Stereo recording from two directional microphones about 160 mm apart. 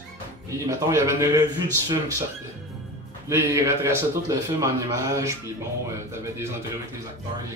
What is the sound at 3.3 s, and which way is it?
A man's voice, 20° right (ahead or behind).